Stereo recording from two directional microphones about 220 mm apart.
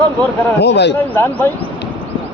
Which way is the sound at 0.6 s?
50° left (ahead or behind).